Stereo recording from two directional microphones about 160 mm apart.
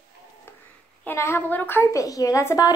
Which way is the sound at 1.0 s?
15° left (ahead or behind).